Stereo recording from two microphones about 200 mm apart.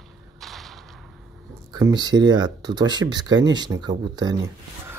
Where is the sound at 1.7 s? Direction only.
20° right (ahead or behind).